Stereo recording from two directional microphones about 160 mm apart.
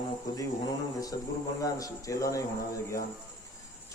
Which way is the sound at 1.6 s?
20° left (ahead or behind).